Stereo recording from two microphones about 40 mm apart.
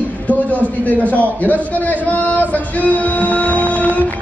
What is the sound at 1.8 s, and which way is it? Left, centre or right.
Music, left.